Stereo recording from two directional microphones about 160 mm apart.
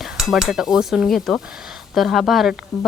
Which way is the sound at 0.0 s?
Centre (ahead or behind).